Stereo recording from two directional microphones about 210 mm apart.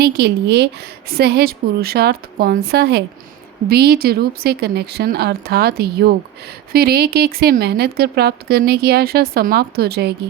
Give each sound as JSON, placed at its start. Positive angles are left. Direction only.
{"t": 0.0, "sound": "speech", "side_deg": -50}